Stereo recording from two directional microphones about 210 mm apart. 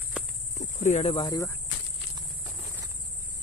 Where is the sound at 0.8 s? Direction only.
35° left (ahead or behind); by 1.5 s 20° left (ahead or behind).